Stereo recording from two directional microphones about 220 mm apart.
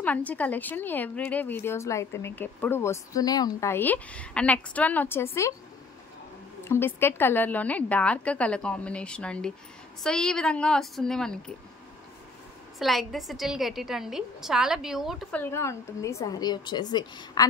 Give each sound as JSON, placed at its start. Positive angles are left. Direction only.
{"t": 0.0, "sound": "a woman's voice", "side_deg": 5}
{"t": 6.7, "sound": "a woman's voice", "side_deg": 10}
{"t": 12.7, "sound": "a woman's voice", "side_deg": 0}
{"t": 15.4, "sound": "a woman's voice", "side_deg": 10}